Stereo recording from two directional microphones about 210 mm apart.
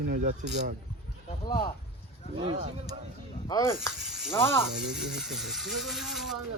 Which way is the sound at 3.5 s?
15° left (ahead or behind).